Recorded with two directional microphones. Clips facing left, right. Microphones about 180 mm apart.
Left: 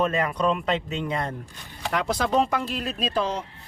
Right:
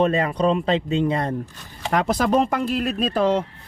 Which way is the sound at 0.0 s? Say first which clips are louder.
Right 4 dB; 30° right (ahead or behind).